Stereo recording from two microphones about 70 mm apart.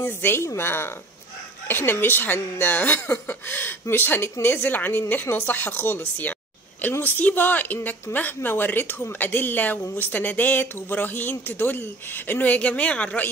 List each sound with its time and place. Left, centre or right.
0.0 s a woman's voice: left